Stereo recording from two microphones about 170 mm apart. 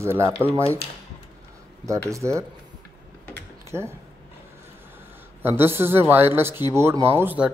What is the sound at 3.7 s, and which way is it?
Speech, 15° right (ahead or behind).